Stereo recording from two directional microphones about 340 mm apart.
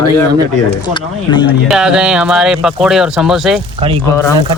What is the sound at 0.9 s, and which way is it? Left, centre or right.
Speech, centre.